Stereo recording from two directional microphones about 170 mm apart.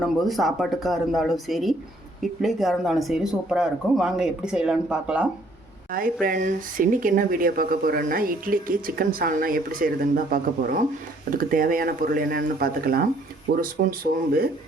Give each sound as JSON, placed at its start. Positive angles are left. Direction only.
{"t": 0.0, "sound": "speech", "side_deg": 0}
{"t": 5.9, "sound": "speech", "side_deg": -55}